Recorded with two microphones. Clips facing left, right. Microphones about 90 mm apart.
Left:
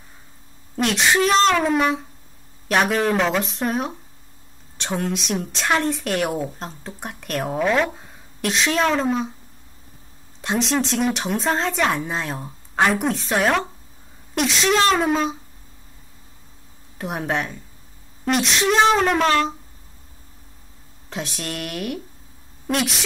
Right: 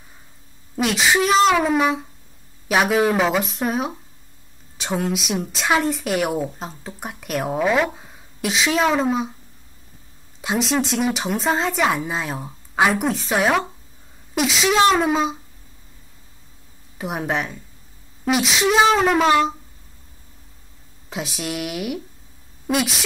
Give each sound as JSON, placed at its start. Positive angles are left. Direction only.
{"t": 0.7, "sound": "speech", "side_deg": 0}
{"t": 10.4, "sound": "a woman's voice", "side_deg": -5}
{"t": 17.0, "sound": "speech", "side_deg": 0}
{"t": 21.1, "sound": "speech", "side_deg": -5}